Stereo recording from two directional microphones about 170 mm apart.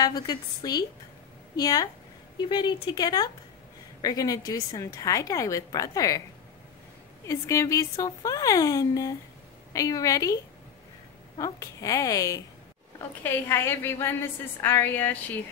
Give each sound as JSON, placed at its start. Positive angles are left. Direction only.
{"t": 0.0, "sound": "a woman's voice", "side_deg": 25}
{"t": 7.2, "sound": "a woman's voice", "side_deg": 20}